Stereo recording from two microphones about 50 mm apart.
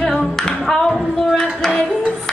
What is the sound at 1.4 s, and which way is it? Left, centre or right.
Music, centre.